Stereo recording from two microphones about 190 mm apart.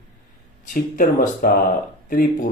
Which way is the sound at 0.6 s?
45° left (ahead or behind).